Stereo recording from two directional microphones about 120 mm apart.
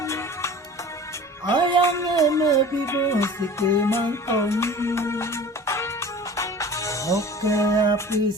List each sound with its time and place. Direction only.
0.0 s music: 25° left (ahead or behind)
1.5 s music: 40° right (ahead or behind)
1.8 s music: 25° left (ahead or behind)